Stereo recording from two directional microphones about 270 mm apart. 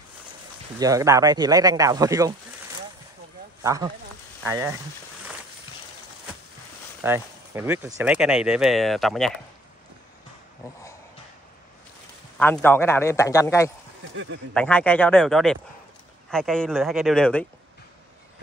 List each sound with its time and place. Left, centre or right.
0.7 s speech: centre
3.6 s speech: centre
7.0 s speech: centre
12.4 s a man's voice: centre
14.1 s speech: right
14.5 s speech: centre